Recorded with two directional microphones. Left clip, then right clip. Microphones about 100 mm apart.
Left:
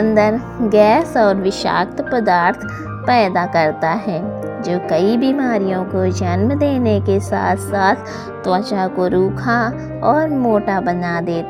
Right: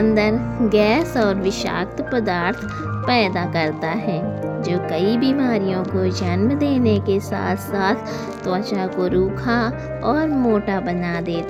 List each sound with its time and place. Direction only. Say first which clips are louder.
0.0 s speech: left 4 dB; 65° left (ahead or behind); by 4.2 s 90° left
4.6 s speech: left 5 dB; 75° left (ahead or behind)
5.2 s speech: left 3 dB; 50° left (ahead or behind)
6.4 s speech: left 2 dB; 45° left (ahead or behind); by 7.9 s 65° left (ahead or behind)
8.4 s speech: left 6 dB; 75° left (ahead or behind); by 10.6 s 50° left (ahead or behind)
10.7 s speech: left 5 dB; 70° left (ahead or behind); by 11.4 s 85° left